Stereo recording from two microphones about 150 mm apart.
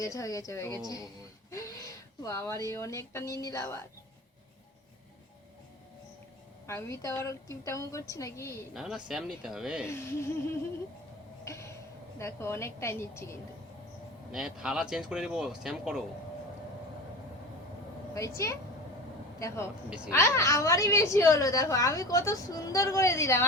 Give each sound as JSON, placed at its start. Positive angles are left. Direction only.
{"t": 0.0, "sound": "a woman's voice", "side_deg": 20}
{"t": 6.7, "sound": "a woman's voice", "side_deg": 20}
{"t": 8.7, "sound": "speech", "side_deg": -5}
{"t": 9.8, "sound": "a woman's voice", "side_deg": 15}
{"t": 11.4, "sound": "a sound", "side_deg": 20}
{"t": 12.2, "sound": "a woman's voice", "side_deg": 15}
{"t": 14.3, "sound": "speech", "side_deg": -5}
{"t": 18.1, "sound": "a woman's voice", "side_deg": 20}